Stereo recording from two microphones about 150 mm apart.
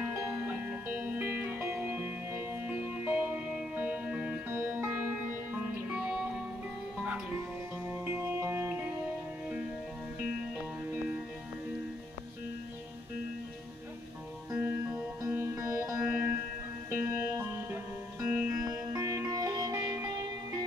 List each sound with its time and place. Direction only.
0.0 s music: 10° right (ahead or behind)
14.5 s music: 10° right (ahead or behind)